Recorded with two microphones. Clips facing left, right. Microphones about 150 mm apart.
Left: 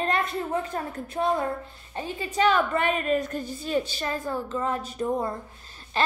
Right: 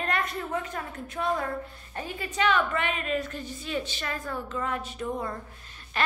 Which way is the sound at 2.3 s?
35° left (ahead or behind).